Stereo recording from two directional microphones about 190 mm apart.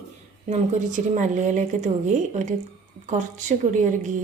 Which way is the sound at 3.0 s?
40° right (ahead or behind).